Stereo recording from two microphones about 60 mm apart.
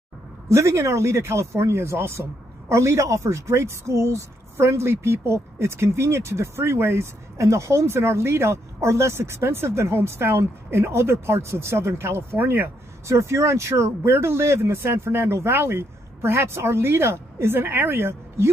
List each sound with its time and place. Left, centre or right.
0.5 s speech: right
14.0 s speech: right